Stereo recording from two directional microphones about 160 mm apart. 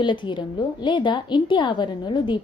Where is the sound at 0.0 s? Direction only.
30° left (ahead or behind).